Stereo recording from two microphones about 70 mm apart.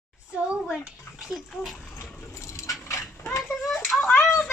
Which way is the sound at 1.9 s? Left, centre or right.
Left.